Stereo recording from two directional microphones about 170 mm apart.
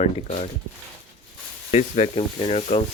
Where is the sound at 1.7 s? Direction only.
40° left (ahead or behind).